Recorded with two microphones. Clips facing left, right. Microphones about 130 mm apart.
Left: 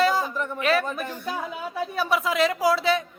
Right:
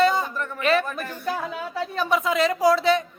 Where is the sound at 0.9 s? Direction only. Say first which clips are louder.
Right 1 dB; 20° left (ahead or behind).